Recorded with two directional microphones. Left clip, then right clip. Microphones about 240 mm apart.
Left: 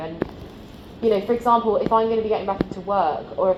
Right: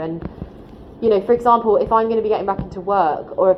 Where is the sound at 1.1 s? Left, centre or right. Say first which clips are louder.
Right 4 dB; right.